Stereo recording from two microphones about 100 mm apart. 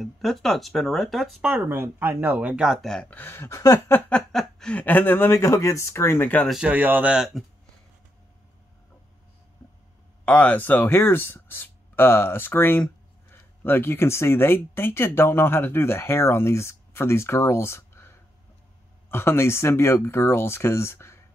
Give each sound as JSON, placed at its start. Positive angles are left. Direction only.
{"t": 0.0, "sound": "speech", "side_deg": 0}
{"t": 1.7, "sound": "speech", "side_deg": -20}
{"t": 3.1, "sound": "speech", "side_deg": 20}
{"t": 4.1, "sound": "speech", "side_deg": 5}
{"t": 6.5, "sound": "speech", "side_deg": -15}
{"t": 10.2, "sound": "speech", "side_deg": 15}